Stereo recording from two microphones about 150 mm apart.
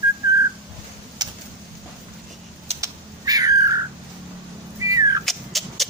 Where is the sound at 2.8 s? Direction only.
25° right (ahead or behind).